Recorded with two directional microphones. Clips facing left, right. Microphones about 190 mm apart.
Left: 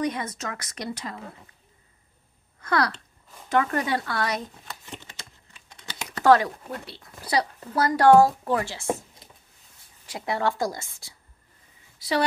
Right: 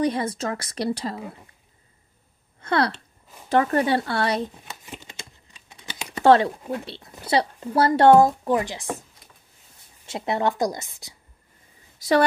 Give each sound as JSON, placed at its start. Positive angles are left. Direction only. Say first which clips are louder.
{"t": 0.0, "sound": "speech", "louder": "right 5 dB", "side_deg": -30}
{"t": 2.6, "sound": "speech", "louder": "right 2 dB", "side_deg": -25}
{"t": 4.8, "sound": "typing", "louder": "right 2 dB", "side_deg": -15}
{"t": 6.2, "sound": "speech", "louder": "right 2 dB", "side_deg": -25}
{"t": 10.0, "sound": "speech", "louder": "right 3 dB", "side_deg": -25}
{"t": 12.0, "sound": "speech", "louder": "right 6 dB", "side_deg": -45}